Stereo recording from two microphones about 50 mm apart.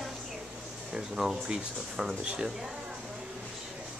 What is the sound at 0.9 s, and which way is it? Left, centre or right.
Speech, centre.